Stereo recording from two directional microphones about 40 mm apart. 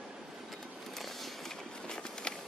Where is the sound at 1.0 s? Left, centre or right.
Centre.